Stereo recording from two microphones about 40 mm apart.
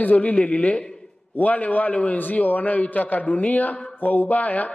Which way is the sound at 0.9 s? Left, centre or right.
Centre.